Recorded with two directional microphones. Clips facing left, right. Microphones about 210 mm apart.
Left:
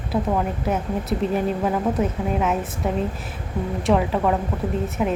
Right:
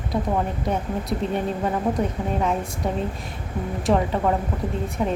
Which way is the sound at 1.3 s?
5° left (ahead or behind).